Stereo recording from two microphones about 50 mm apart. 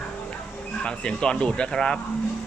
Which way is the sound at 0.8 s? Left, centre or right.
Centre.